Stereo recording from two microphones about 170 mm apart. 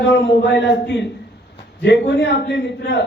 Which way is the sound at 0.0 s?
90° left.